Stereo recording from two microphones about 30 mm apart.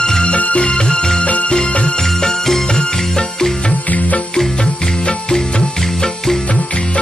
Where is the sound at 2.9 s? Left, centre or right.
Centre.